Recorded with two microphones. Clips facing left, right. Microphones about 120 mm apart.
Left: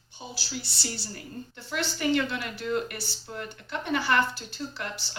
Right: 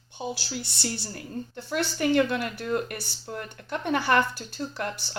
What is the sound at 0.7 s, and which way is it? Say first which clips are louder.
A woman's voice: right 4 dB; 50° right (ahead or behind).